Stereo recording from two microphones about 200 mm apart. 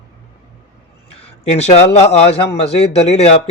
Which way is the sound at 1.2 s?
30° left (ahead or behind).